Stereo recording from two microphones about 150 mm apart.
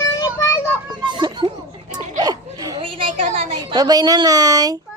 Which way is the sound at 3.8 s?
25° right (ahead or behind).